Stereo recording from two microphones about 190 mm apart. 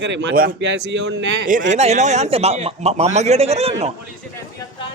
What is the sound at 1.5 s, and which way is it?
A man's voice, 40° right (ahead or behind).